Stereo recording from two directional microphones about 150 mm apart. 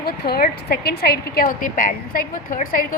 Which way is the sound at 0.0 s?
85° left.